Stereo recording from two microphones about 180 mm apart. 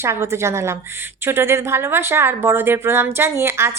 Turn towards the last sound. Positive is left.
turn(degrees=-15)  # may be behind; listen again after turning